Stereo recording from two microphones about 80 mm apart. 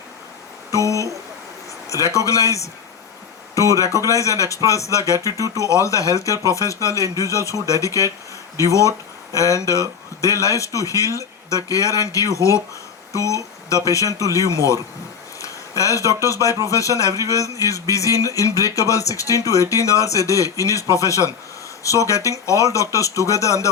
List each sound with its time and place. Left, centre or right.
0.7 s speech: left